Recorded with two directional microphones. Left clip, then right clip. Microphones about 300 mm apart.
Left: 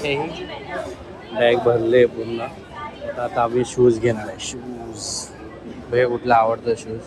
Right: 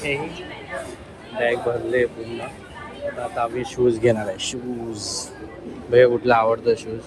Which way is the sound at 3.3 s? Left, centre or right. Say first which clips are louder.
Left 6 dB; centre.